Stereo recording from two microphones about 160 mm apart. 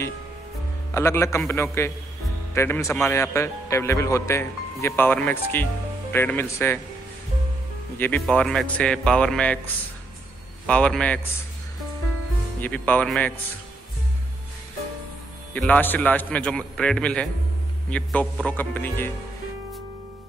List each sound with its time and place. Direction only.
0.9 s a man's voice: 15° left (ahead or behind)
8.3 s a man's voice: centre (ahead or behind)
10.7 s a man's voice: 5° left (ahead or behind)
12.5 s a man's voice: 10° left (ahead or behind)
15.5 s a man's voice: 10° left (ahead or behind)